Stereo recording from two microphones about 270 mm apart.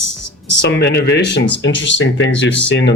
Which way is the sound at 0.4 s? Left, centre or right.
Left.